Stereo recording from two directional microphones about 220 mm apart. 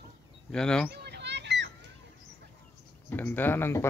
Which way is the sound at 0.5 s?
5° left (ahead or behind).